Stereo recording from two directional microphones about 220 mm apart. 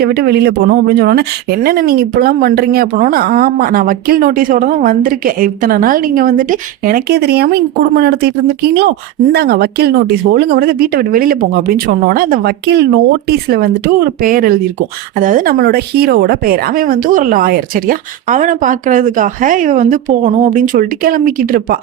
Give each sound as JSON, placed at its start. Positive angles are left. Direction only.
{"t": 0.0, "sound": "speech", "side_deg": -45}